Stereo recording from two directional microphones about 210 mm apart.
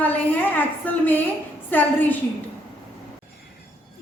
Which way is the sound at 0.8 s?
10° left (ahead or behind).